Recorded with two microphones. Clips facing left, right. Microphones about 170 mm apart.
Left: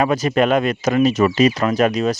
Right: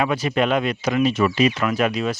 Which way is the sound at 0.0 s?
40° left (ahead or behind).